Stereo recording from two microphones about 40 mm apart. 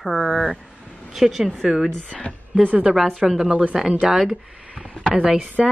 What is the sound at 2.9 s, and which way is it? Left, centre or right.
Speech, centre.